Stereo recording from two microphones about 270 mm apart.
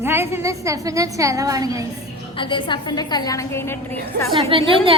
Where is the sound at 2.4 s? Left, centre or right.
Centre.